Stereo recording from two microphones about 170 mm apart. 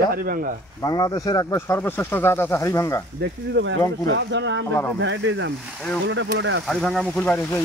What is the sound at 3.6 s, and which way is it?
Speech, 90° right.